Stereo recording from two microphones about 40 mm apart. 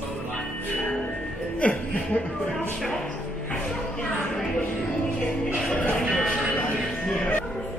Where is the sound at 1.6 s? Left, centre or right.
Left.